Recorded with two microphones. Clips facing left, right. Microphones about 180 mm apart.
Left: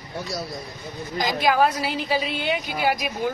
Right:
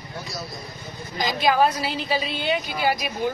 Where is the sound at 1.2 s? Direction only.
15° left (ahead or behind).